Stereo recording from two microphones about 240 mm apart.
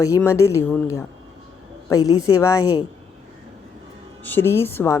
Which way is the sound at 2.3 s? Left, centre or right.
Centre.